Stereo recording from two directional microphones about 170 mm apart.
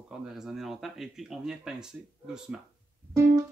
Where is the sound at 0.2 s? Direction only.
Centre (ahead or behind).